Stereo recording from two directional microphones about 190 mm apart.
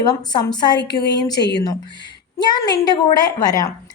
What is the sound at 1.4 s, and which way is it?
Speech, 60° left (ahead or behind).